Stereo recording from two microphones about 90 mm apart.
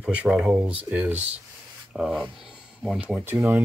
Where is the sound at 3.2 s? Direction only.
25° right (ahead or behind).